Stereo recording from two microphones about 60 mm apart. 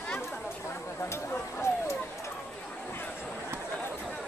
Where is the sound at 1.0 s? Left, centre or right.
Left.